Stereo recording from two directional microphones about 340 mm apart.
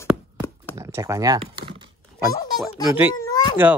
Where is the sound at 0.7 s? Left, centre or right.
Centre.